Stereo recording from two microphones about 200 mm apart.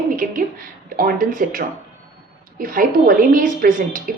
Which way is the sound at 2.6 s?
45° right (ahead or behind).